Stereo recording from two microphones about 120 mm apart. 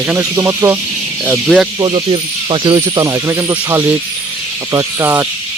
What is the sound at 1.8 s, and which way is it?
Speech, 45° right (ahead or behind).